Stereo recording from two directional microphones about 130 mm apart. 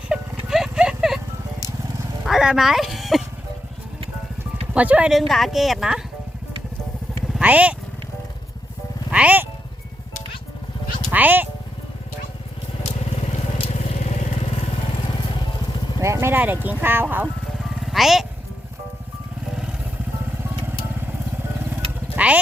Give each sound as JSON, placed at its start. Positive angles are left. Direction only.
{"t": 0.1, "sound": "horse", "side_deg": -5}
{"t": 2.2, "sound": "speech", "side_deg": -5}
{"t": 4.7, "sound": "a woman's voice", "side_deg": -10}
{"t": 7.3, "sound": "speech", "side_deg": -10}
{"t": 9.0, "sound": "speech", "side_deg": -10}
{"t": 11.1, "sound": "speech", "side_deg": -15}
{"t": 13.2, "sound": "vehicle", "side_deg": 55}
{"t": 15.1, "sound": "vehicle", "side_deg": 35}
{"t": 16.0, "sound": "speech", "side_deg": -20}
{"t": 17.6, "sound": "music", "side_deg": 0}
{"t": 22.1, "sound": "vehicle", "side_deg": -10}